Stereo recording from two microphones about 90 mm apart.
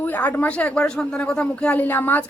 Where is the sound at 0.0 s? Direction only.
20° left (ahead or behind).